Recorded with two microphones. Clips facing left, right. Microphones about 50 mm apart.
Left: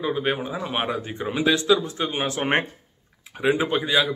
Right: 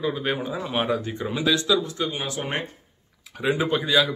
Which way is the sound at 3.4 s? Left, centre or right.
Centre.